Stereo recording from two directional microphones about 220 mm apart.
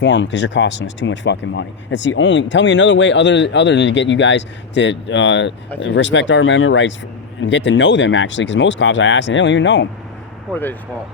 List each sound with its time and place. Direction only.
0.0 s speech: 55° left (ahead or behind)
10.5 s speech: 10° left (ahead or behind)